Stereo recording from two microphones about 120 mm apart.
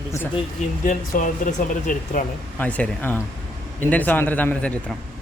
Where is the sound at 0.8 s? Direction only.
90° left.